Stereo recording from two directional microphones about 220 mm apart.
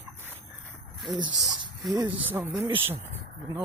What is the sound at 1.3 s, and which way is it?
Speech, centre (ahead or behind).